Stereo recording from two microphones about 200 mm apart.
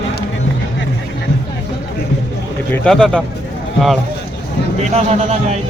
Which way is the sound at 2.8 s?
5° left (ahead or behind).